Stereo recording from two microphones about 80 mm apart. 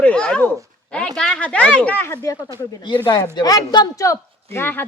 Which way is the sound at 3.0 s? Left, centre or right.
Left.